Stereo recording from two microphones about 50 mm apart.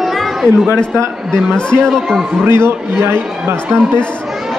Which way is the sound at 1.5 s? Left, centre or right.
Centre.